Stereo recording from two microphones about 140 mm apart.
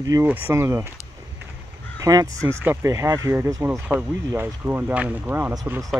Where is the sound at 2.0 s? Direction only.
25° right (ahead or behind).